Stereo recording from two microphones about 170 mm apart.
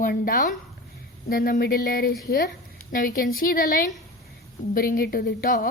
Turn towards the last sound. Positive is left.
turn(degrees=60)  # may be behind; listen again after turning